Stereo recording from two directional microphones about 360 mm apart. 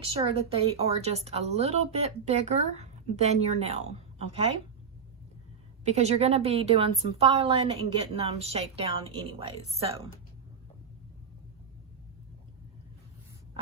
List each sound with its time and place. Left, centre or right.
0.0 s speech: centre
5.8 s speech: centre